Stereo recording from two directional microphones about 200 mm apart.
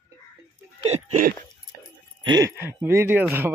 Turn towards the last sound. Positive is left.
turn(degrees=-10)  # may be behind; listen again after turning